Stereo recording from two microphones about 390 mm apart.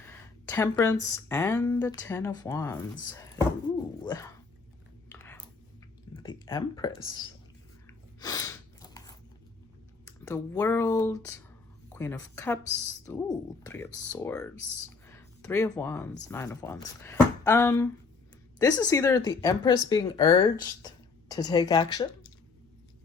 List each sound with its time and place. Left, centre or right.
0.0 s speech: centre
5.1 s clicking: centre
6.1 s speech: centre
7.9 s chewing: centre
10.1 s speech: centre
14.8 s a sound: centre
16.3 s speech: centre